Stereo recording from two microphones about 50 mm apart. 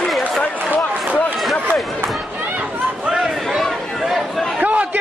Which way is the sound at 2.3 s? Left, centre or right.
Right.